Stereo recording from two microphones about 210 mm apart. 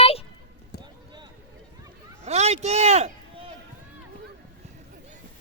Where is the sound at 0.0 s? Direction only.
30° left (ahead or behind).